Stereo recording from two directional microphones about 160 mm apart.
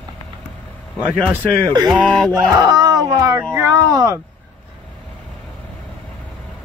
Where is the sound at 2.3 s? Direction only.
25° right (ahead or behind).